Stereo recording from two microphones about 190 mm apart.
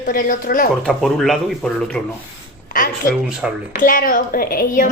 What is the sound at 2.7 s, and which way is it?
A woman's voice, 45° left (ahead or behind).